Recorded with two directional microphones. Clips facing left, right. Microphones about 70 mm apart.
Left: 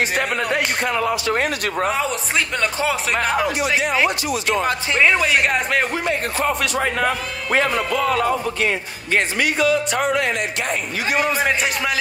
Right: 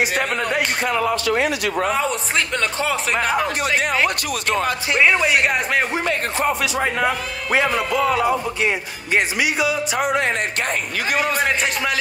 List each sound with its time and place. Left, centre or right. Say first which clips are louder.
0.1 s speech: even; centre
1.2 s a man's voice: right 1 dB; left
1.9 s speech: right 1 dB; centre
4.3 s speech: left 1 dB; right
5.0 s speech: even; centre
11.3 s speech: even; centre